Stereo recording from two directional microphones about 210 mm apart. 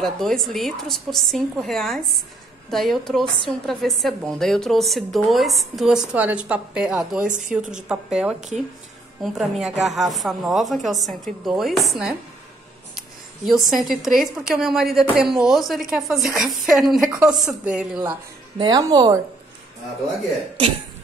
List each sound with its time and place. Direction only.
0.0 s a woman's voice: centre (ahead or behind)
7.2 s a woman's voice: 35° right (ahead or behind)
7.5 s a woman's voice: 5° right (ahead or behind)
13.5 s a woman's voice: centre (ahead or behind)
18.6 s speech: 20° right (ahead or behind)